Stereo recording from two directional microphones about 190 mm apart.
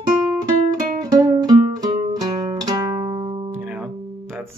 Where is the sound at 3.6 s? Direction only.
5° right (ahead or behind).